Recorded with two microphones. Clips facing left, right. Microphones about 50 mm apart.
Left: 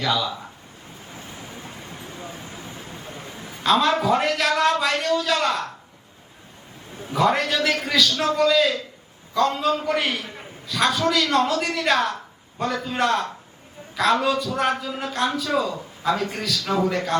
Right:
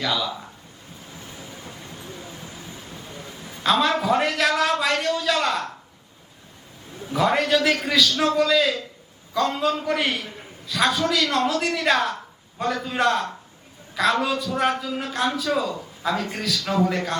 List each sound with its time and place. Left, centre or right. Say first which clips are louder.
0.0 s a man's voice: left 2 dB; centre
1.1 s vehicle: left 2 dB; centre
1.9 s a sound: left 2 dB; centre
3.6 s a man's voice: left 1 dB; centre
7.1 s a man's voice: even; centre